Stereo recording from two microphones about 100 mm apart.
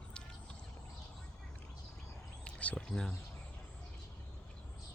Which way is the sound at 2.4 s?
10° left (ahead or behind).